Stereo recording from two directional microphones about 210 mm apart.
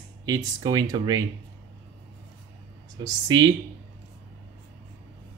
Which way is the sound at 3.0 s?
20° right (ahead or behind).